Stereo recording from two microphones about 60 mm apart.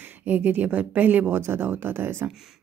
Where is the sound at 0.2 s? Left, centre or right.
Right.